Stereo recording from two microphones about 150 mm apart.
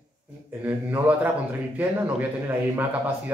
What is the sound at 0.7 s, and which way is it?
Speech, 10° right (ahead or behind).